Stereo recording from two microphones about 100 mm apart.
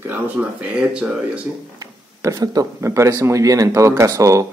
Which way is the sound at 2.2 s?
40° right (ahead or behind).